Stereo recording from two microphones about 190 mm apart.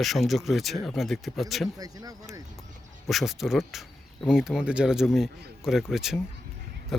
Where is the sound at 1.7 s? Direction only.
20° right (ahead or behind).